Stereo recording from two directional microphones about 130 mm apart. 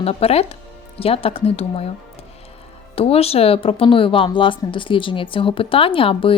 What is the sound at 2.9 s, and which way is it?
Speech, 50° left (ahead or behind).